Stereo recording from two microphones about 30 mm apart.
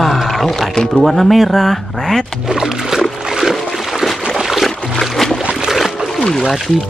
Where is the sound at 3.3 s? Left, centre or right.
Centre.